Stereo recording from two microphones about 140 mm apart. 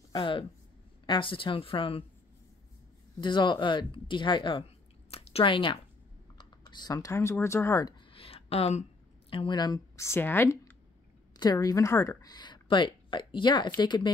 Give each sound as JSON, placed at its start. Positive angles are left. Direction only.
{"t": 0.1, "sound": "a woman's voice", "side_deg": 35}
{"t": 3.2, "sound": "a woman's voice", "side_deg": 35}
{"t": 8.1, "sound": "a sound", "side_deg": 40}
{"t": 9.3, "sound": "a woman's voice", "side_deg": 35}